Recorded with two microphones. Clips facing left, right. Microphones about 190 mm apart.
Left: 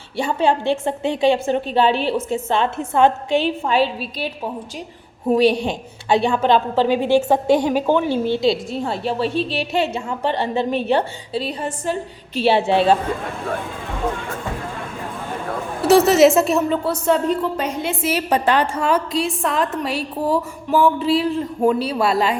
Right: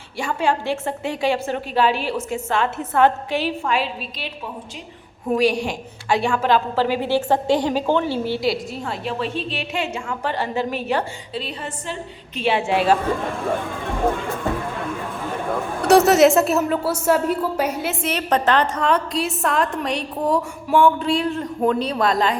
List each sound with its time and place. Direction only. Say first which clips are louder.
0.2 s a woman's voice: left 3 dB; 25° left (ahead or behind)
5.3 s a woman's voice: left 3 dB; 25° left (ahead or behind)
15.9 s a woman's voice: left 1 dB; centre (ahead or behind)
18.0 s a woman's voice: left 2 dB; 10° left (ahead or behind)